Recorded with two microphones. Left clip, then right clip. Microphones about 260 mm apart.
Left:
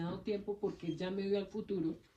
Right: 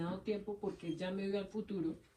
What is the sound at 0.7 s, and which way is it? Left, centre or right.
Speech, left.